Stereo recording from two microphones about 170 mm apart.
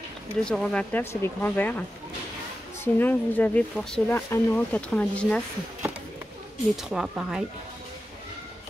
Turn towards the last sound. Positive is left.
turn(degrees=-5)  # may be behind; listen again after turning